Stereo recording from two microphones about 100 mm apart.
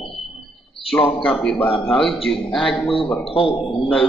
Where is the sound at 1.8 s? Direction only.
5° left (ahead or behind).